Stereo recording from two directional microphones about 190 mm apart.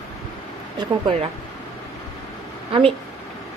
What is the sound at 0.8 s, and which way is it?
Speech, 25° right (ahead or behind).